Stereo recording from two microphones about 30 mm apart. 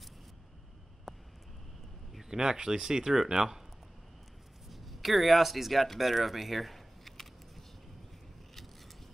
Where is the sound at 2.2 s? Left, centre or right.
Right.